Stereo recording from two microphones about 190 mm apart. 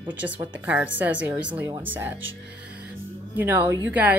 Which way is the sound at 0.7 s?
10° right (ahead or behind).